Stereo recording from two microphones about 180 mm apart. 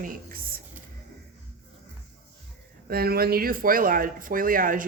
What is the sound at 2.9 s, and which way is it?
Speech, 60° right (ahead or behind).